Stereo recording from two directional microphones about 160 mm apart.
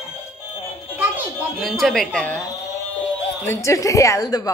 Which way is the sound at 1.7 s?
5° left (ahead or behind).